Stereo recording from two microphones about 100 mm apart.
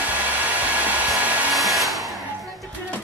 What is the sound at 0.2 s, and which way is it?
Hair dryer, 15° right (ahead or behind).